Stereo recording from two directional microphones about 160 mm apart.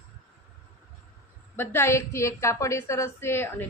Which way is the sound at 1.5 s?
15° left (ahead or behind).